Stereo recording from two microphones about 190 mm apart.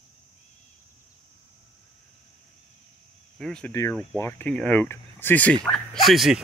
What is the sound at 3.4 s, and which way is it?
Speech, 5° left (ahead or behind).